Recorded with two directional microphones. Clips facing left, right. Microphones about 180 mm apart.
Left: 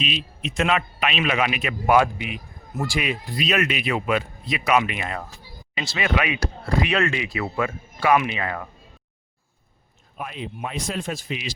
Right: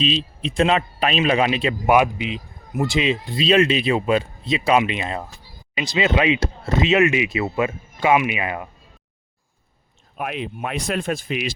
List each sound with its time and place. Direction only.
0.0 s speech: 30° right (ahead or behind)
1.9 s speech: 20° right (ahead or behind)
10.2 s speech: 70° right (ahead or behind); by 11.5 s 55° right (ahead or behind)